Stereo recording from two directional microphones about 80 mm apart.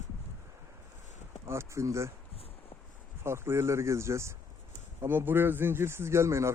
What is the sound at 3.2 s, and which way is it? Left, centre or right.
Speech, right.